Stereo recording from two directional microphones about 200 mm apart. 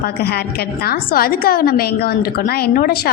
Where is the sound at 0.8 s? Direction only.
50° left (ahead or behind).